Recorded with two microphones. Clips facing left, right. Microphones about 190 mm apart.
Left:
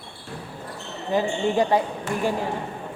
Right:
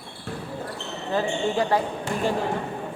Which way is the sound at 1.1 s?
20° left (ahead or behind).